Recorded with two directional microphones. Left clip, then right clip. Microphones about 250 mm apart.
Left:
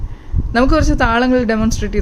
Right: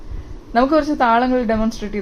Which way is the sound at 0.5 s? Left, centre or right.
Left.